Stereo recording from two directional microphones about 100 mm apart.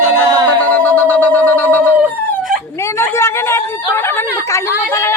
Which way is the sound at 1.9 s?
5° right (ahead or behind).